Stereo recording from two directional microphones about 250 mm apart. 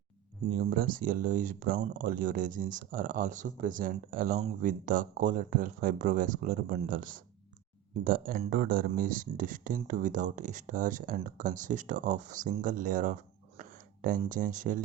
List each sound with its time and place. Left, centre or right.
0.6 s speech: right